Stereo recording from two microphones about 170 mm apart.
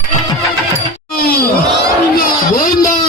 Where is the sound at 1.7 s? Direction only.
60° left (ahead or behind).